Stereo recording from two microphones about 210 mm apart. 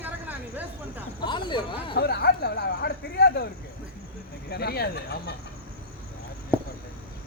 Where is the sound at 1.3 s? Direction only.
20° left (ahead or behind).